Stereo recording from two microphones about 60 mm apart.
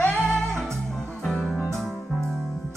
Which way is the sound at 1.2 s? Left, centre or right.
Centre.